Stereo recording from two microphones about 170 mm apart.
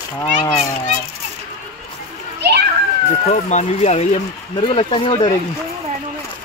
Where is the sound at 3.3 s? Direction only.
45° left (ahead or behind).